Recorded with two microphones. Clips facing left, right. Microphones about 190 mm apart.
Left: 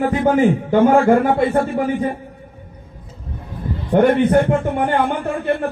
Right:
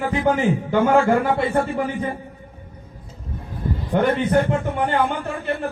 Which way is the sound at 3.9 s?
55° left (ahead or behind).